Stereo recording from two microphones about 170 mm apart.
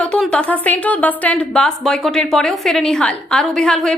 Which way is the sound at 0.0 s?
5° left (ahead or behind).